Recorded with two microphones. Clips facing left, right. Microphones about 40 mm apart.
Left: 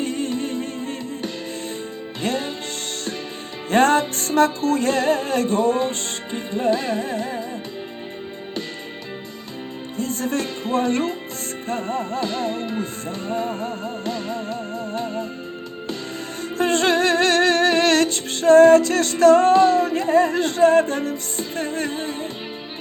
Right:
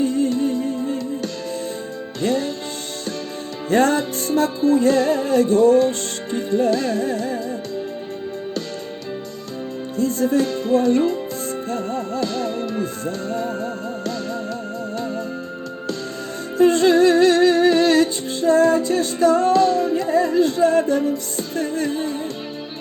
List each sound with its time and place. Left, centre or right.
0.0 s music: left
0.3 s music: left
2.2 s speech: left
3.7 s music: left
10.0 s music: left
10.4 s music: left
10.8 s speech: left
11.7 s music: left
16.6 s music: left
18.8 s music: left
19.5 s singing: left
20.0 s music: left
21.3 s music: left